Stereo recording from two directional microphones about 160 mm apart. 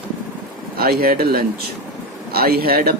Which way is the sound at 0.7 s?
75° right (ahead or behind).